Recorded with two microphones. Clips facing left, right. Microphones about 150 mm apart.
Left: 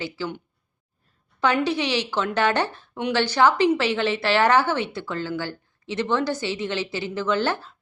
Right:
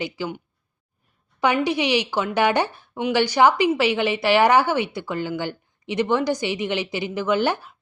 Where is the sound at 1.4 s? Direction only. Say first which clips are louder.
Right 1 dB; 15° right (ahead or behind).